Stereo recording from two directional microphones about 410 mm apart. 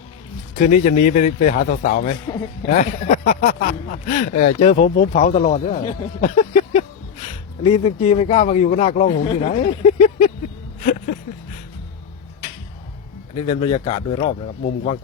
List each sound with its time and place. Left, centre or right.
0.6 s a man's voice: centre
13.5 s speech: centre